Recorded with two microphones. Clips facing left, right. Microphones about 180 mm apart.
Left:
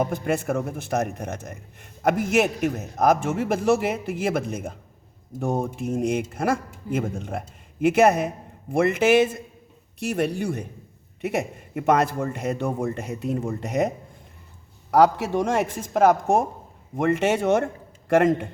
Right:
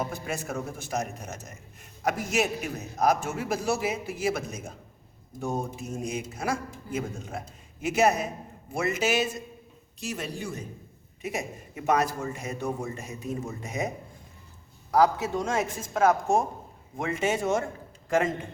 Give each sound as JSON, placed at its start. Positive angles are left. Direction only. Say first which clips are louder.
{"t": 0.0, "sound": "speech", "louder": "left 8 dB", "side_deg": 55}
{"t": 14.8, "sound": "a man's voice", "louder": "left 4 dB", "side_deg": 70}
{"t": 15.9, "sound": "a woman's voice", "louder": "left 4 dB", "side_deg": 55}
{"t": 17.0, "sound": "speech", "louder": "left 6 dB", "side_deg": 65}